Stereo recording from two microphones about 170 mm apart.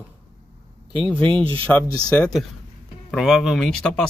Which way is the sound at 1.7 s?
5° left (ahead or behind).